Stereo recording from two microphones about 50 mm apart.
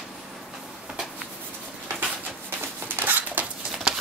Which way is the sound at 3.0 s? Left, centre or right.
Right.